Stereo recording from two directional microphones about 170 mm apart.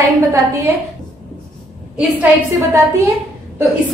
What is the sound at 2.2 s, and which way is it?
Speech, 15° right (ahead or behind).